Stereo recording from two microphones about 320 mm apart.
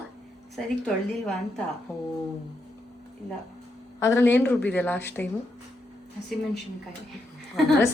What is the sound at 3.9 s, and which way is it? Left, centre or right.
Speech, centre.